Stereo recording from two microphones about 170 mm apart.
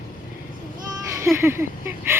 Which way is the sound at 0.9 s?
15° right (ahead or behind).